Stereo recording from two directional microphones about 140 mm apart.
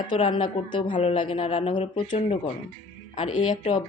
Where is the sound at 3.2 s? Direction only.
60° left (ahead or behind).